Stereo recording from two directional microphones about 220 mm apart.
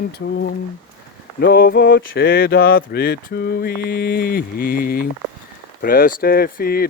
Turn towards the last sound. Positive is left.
turn(degrees=45)  # may be behind; listen again after turning